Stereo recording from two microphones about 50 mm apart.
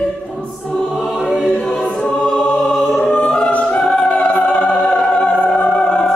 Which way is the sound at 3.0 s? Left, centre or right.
Left.